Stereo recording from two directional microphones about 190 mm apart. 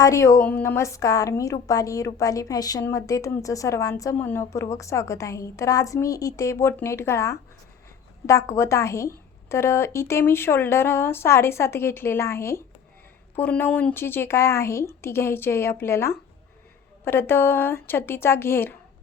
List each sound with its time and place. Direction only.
0.0 s a woman's voice: 15° left (ahead or behind)